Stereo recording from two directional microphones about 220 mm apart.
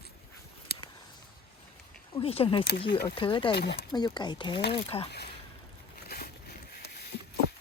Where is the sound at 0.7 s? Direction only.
45° left (ahead or behind).